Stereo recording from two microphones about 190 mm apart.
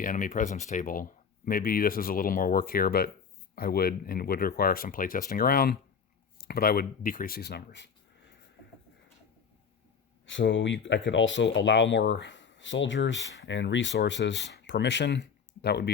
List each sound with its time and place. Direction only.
0.0 s speech: 45° left (ahead or behind); by 7.9 s 60° left (ahead or behind)
10.2 s speech: 75° left (ahead or behind); by 15.9 s 60° left (ahead or behind)